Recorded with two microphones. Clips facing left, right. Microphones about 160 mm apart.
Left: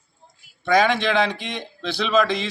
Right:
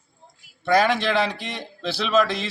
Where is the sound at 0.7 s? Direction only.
5° right (ahead or behind).